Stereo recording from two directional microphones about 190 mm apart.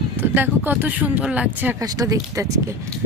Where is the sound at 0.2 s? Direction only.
10° right (ahead or behind).